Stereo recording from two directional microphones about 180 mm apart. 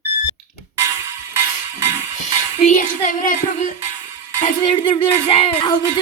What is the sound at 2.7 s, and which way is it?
Speech, 45° left (ahead or behind).